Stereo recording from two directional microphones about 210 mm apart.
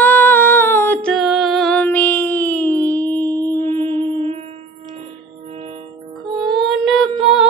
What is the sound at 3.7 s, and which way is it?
Music, 25° right (ahead or behind).